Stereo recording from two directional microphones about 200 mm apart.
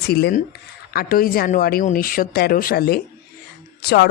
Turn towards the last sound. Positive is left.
turn(degrees=55)  # may be behind; listen again after turning